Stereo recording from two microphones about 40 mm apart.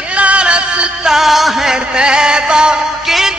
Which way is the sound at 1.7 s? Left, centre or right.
Right.